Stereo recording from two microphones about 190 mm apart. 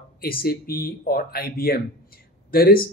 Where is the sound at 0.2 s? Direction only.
50° left (ahead or behind).